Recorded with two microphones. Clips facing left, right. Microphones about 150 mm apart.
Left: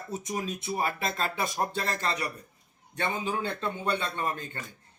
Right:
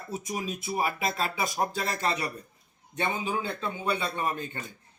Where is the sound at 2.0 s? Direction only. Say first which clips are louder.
Right 4 dB; 20° right (ahead or behind).